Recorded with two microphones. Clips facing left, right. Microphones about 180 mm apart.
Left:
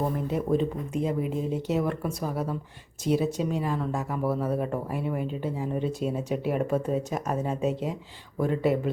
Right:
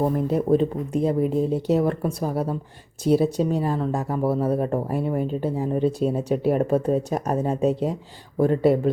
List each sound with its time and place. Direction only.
0.3 s speech: 40° right (ahead or behind)